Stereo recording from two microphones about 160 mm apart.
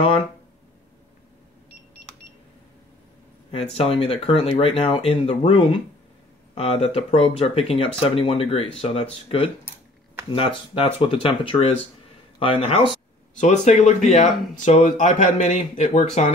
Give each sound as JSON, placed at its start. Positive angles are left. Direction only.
{"t": 3.5, "sound": "speech", "side_deg": 35}
{"t": 13.4, "sound": "speech", "side_deg": 50}